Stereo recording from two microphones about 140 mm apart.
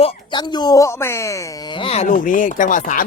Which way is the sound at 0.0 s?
35° left (ahead or behind).